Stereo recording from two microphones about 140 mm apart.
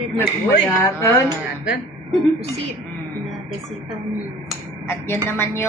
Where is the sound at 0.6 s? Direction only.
20° left (ahead or behind).